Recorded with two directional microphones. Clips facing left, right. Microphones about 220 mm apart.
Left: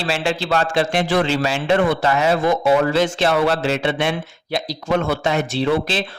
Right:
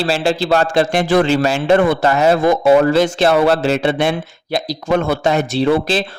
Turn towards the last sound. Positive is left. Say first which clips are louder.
# right 4 dB
turn(degrees=-40)  # may be behind; listen again after turning